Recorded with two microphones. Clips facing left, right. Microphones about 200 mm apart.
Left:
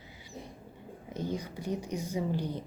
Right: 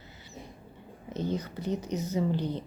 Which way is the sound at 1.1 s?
10° left (ahead or behind).